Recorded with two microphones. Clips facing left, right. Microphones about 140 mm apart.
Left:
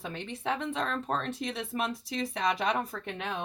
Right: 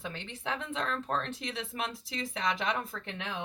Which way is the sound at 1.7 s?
40° left (ahead or behind).